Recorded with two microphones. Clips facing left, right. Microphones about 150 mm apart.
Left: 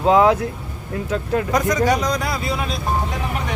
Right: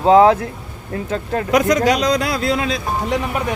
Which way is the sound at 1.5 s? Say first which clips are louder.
Right 5 dB; 75° right (ahead or behind).